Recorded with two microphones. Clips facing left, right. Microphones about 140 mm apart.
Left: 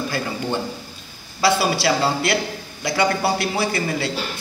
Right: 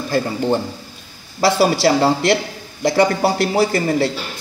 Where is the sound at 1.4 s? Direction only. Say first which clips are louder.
Right 4 dB; 40° right (ahead or behind).